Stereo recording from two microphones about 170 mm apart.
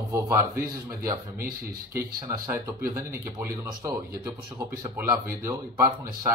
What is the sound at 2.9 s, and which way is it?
Speech, 15° right (ahead or behind).